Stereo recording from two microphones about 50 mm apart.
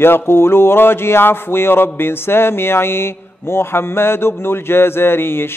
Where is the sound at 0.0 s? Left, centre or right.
Left.